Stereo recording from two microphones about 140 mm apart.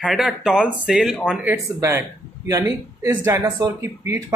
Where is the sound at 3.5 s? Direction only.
30° right (ahead or behind).